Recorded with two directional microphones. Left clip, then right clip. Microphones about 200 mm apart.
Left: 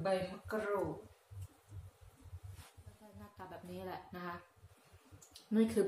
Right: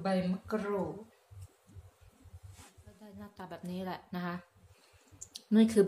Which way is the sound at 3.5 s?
50° right (ahead or behind).